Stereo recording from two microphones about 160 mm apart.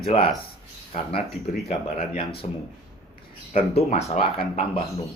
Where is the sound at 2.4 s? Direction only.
40° left (ahead or behind).